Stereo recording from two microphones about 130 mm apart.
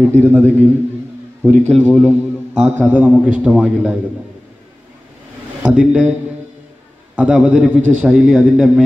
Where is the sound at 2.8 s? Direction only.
10° right (ahead or behind).